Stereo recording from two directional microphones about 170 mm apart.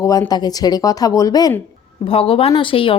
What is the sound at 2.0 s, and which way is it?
Speech, 35° left (ahead or behind).